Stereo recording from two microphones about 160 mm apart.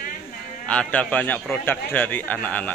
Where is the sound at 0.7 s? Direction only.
5° left (ahead or behind).